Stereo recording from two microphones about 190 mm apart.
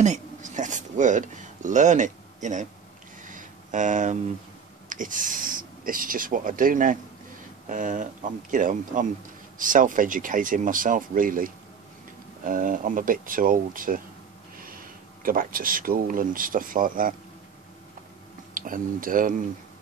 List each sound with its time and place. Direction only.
0.0 s speech: 40° right (ahead or behind)
3.2 s a sound: 45° right (ahead or behind)
4.8 s speech: 45° right (ahead or behind)
18.5 s speech: 45° right (ahead or behind)